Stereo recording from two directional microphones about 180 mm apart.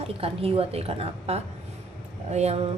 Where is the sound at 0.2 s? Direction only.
30° right (ahead or behind).